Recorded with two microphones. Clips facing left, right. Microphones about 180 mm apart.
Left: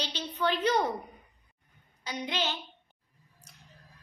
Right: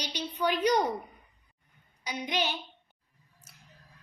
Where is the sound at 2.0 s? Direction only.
15° right (ahead or behind).